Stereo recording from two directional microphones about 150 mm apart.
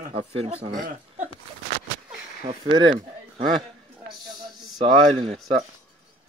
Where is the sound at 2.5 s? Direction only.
40° right (ahead or behind).